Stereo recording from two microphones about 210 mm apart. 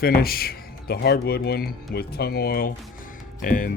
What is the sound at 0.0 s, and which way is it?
Speech, 45° left (ahead or behind).